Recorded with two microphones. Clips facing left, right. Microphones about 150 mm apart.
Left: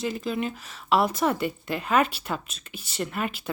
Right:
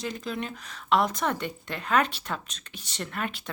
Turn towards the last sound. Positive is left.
turn(degrees=5)  # may be behind; listen again after turning